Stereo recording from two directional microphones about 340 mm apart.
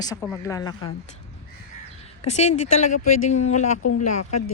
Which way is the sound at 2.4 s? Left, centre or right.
Centre.